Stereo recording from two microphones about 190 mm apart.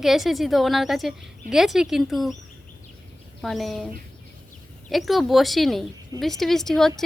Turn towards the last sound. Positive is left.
turn(degrees=0)  # may be behind; listen again after turning